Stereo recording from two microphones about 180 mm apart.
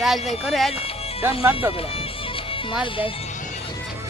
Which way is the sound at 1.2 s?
15° right (ahead or behind).